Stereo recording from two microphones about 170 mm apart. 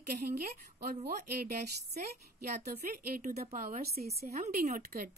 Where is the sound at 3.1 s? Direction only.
60° right (ahead or behind).